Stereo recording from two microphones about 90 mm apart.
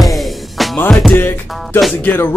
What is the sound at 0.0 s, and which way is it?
Music, centre (ahead or behind).